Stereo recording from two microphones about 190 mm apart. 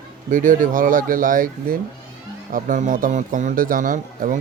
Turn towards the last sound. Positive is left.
turn(degrees=-45)  # may be behind; listen again after turning